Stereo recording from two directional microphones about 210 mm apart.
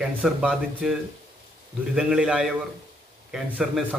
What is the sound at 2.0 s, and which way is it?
A man's voice, centre (ahead or behind).